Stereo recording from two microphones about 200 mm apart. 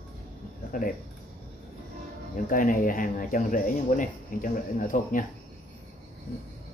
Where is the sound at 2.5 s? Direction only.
40° left (ahead or behind).